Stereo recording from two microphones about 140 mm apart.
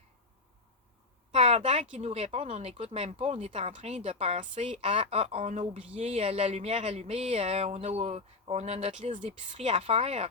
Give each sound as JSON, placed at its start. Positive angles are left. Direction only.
{"t": 1.3, "sound": "speech", "side_deg": -50}
{"t": 4.4, "sound": "a woman's voice", "side_deg": -60}
{"t": 4.8, "sound": "speech", "side_deg": -45}